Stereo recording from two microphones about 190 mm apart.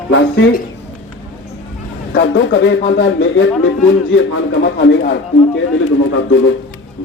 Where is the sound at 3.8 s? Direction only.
90° left; by 5.6 s 65° left (ahead or behind).